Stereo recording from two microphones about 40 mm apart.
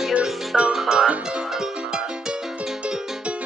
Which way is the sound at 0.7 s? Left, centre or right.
Centre.